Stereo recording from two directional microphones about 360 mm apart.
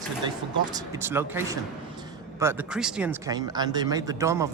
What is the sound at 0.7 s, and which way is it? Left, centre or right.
Speech, centre.